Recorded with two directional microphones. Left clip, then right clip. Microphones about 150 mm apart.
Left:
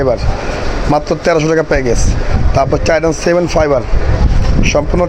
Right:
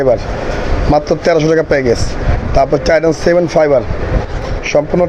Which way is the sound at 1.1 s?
20° left (ahead or behind).